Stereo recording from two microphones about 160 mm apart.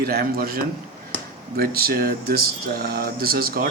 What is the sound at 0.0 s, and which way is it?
Speech, 70° right (ahead or behind).